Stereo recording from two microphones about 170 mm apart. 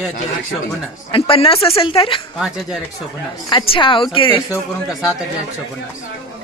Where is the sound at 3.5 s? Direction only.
30° left (ahead or behind).